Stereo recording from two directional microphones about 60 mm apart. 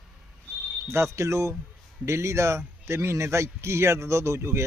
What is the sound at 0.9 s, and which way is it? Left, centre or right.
Speech, right.